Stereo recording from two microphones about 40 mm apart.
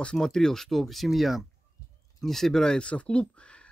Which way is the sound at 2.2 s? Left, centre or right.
Centre.